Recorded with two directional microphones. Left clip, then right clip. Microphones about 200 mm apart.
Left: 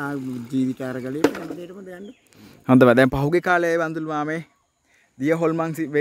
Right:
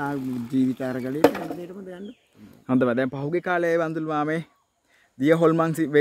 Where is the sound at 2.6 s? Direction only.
60° left (ahead or behind).